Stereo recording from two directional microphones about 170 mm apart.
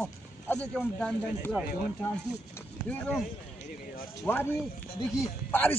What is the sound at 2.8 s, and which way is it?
Speech, 5° left (ahead or behind).